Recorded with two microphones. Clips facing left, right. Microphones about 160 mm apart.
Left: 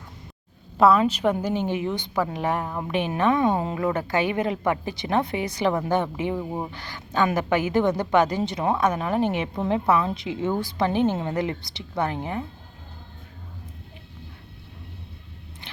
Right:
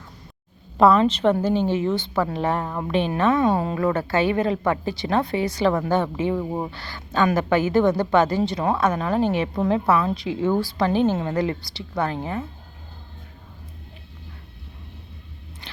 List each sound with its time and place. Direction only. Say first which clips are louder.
0.8 s a woman's voice: right 2 dB; 5° left (ahead or behind)
6.4 s speech: right 3 dB; 5° right (ahead or behind)
6.7 s a woman's voice: right 1 dB; 15° left (ahead or behind)
15.6 s a sound: right 1 dB; 20° left (ahead or behind)